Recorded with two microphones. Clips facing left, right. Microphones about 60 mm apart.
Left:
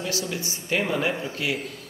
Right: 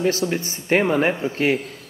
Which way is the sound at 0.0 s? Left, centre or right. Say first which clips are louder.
Right 8 dB; right.